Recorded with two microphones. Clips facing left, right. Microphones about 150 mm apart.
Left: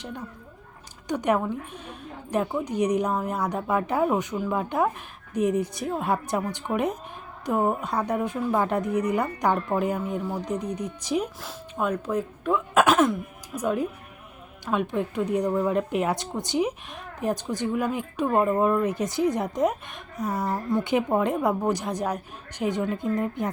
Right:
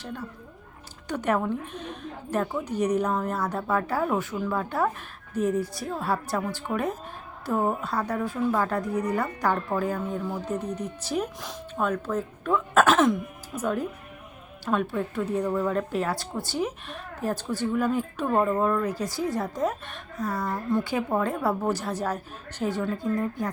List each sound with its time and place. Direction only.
1.0 s a woman's voice: 15° left (ahead or behind)
12.9 s throat clearing: centre (ahead or behind)
13.6 s a woman's voice: 10° left (ahead or behind)